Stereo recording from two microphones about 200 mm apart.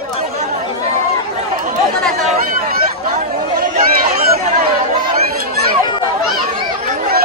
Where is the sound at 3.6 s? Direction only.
45° right (ahead or behind).